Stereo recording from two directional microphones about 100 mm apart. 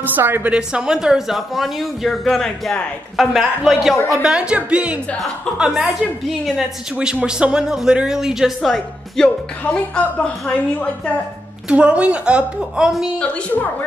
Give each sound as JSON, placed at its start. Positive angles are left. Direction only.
{"t": 0.0, "sound": "speech", "side_deg": -20}
{"t": 0.5, "sound": "a woman's voice", "side_deg": -10}
{"t": 11.7, "sound": "a woman's voice", "side_deg": -10}
{"t": 13.2, "sound": "a woman's voice", "side_deg": 15}